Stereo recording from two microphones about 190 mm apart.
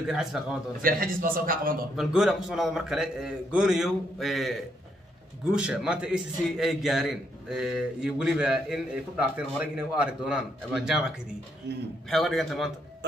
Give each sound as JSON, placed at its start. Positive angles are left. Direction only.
{"t": 0.0, "sound": "a man's voice", "side_deg": 0}
{"t": 0.8, "sound": "a man's voice", "side_deg": -50}
{"t": 2.0, "sound": "a man's voice", "side_deg": 0}
{"t": 12.1, "sound": "a man's voice", "side_deg": 0}